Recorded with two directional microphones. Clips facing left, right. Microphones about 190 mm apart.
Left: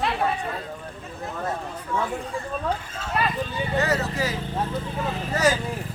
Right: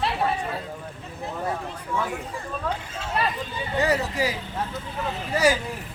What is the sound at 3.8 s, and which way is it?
Speech, 15° right (ahead or behind).